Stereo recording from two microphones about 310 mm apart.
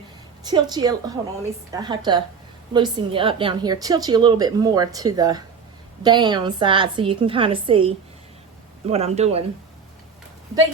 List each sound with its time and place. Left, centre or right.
0.4 s a woman's voice: centre